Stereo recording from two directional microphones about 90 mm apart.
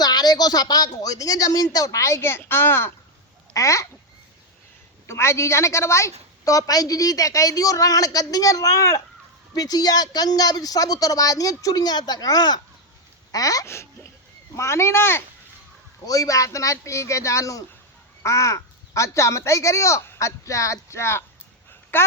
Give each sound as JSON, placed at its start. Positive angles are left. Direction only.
{"t": 0.0, "sound": "a woman's voice", "side_deg": 50}
{"t": 5.0, "sound": "a woman's voice", "side_deg": 30}
{"t": 16.0, "sound": "a woman's voice", "side_deg": 40}